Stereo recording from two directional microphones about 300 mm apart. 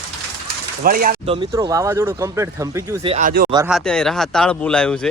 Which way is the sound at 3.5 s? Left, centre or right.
Centre.